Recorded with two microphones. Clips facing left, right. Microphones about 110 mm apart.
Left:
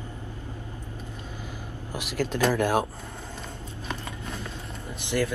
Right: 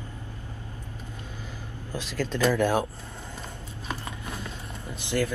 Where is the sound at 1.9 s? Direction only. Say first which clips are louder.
Left 1 dB; 15° left (ahead or behind).